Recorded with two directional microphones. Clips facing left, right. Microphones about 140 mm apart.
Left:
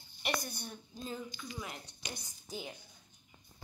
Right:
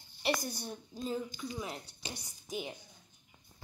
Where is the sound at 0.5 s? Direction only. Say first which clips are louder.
Right 4 dB; 35° right (ahead or behind).